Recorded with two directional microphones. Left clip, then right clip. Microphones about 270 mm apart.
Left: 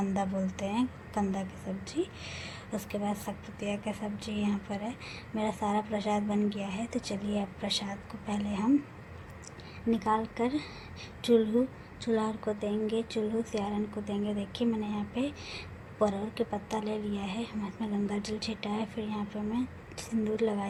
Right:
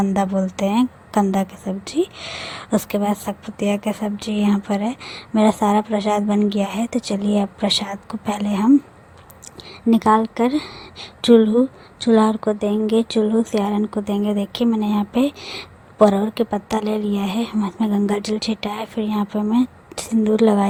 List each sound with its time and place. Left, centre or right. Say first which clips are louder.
0.1 s a woman's voice: right 12 dB; right
9.9 s a woman's voice: right 13 dB; right